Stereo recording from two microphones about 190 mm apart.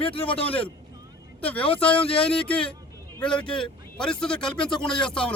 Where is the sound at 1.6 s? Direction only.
30° left (ahead or behind).